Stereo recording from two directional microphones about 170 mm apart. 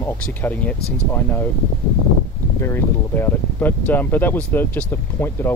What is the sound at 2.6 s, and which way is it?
Speech, 15° left (ahead or behind).